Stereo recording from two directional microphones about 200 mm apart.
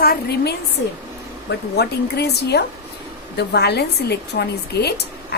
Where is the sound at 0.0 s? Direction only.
50° left (ahead or behind).